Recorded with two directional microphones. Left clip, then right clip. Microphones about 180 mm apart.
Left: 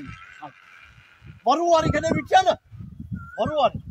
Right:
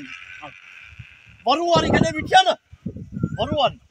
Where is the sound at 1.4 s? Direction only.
15° left (ahead or behind).